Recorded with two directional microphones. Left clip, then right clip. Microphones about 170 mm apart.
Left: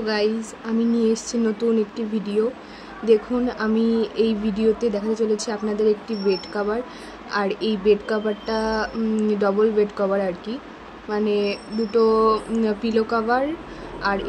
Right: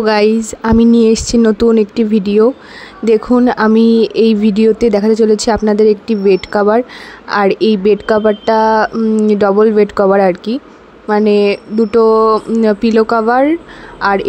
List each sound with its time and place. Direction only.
0.0 s speech: 55° right (ahead or behind)